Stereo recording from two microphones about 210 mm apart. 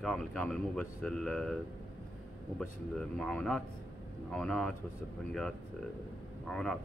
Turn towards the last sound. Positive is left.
turn(degrees=5)  # may be behind; listen again after turning